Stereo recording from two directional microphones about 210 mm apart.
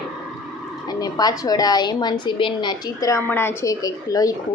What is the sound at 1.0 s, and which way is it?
A woman's voice, 20° left (ahead or behind).